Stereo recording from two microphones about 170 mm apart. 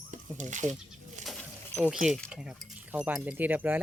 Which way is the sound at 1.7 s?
5° right (ahead or behind).